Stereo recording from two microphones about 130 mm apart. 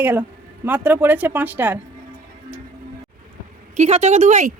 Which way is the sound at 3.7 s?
60° right (ahead or behind).